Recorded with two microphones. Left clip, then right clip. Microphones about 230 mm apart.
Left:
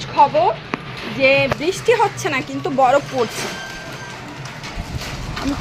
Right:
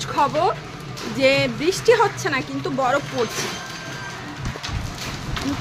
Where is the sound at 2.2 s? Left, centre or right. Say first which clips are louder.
Left 2 dB; centre.